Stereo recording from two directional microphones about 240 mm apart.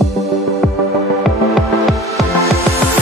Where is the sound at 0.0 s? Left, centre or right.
Centre.